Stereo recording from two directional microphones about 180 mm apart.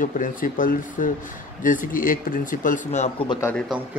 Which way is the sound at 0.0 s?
45° left (ahead or behind).